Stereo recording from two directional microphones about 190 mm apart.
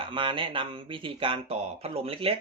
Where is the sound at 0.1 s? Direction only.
25° right (ahead or behind).